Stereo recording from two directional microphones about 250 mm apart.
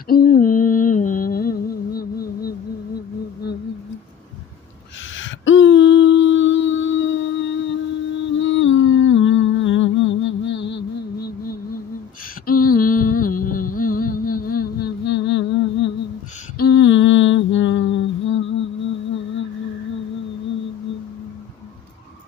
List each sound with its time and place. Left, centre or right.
0.1 s music: left
5.1 s humming: left
10.5 s music: left
12.4 s music: left
16.6 s a sound: left